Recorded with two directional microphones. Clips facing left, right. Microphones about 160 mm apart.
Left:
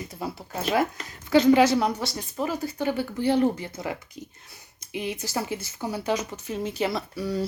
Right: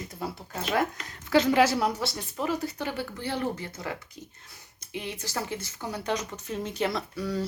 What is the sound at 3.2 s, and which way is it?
Speech, 15° left (ahead or behind).